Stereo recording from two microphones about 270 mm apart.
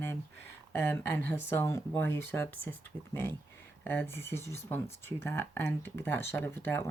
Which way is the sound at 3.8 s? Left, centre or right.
Centre.